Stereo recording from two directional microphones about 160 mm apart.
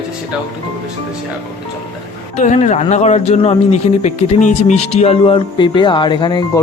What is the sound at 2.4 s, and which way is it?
Speech, 45° left (ahead or behind).